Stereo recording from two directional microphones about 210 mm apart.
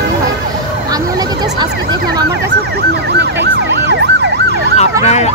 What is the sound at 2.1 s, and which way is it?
Ambulance, 50° right (ahead or behind).